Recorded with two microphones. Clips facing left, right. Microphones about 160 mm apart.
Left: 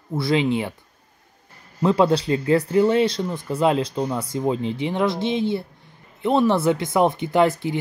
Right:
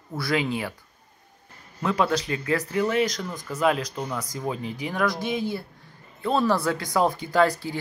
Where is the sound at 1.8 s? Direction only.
30° left (ahead or behind).